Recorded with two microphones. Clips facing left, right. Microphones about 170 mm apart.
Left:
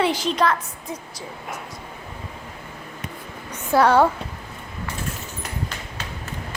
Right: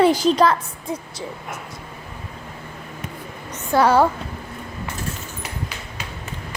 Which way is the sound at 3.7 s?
Centre (ahead or behind).